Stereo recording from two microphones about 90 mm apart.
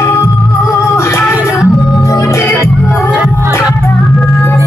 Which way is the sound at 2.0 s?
35° left (ahead or behind).